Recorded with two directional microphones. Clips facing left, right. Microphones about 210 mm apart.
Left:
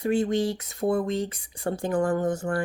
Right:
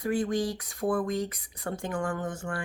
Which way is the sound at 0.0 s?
25° left (ahead or behind).